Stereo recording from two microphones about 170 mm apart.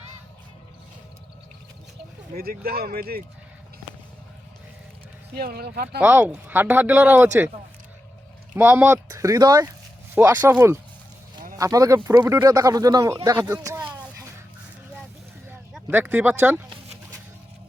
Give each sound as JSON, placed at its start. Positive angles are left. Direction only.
{"t": 2.3, "sound": "speech", "side_deg": -60}
{"t": 5.4, "sound": "speech", "side_deg": -65}
{"t": 6.0, "sound": "speech", "side_deg": -10}
{"t": 8.5, "sound": "speech", "side_deg": -10}
{"t": 13.5, "sound": "a sound", "side_deg": -20}
{"t": 15.9, "sound": "speech", "side_deg": -10}